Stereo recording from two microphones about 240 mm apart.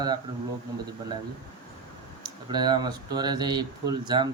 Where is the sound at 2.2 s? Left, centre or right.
Centre.